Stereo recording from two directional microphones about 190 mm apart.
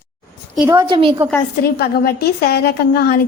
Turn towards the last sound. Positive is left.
turn(degrees=55)  # may be behind; listen again after turning